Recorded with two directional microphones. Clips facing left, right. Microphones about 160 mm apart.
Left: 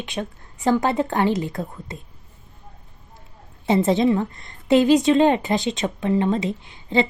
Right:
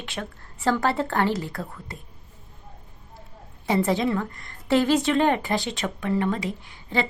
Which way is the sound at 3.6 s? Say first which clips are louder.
Left 5 dB; 25° left (ahead or behind).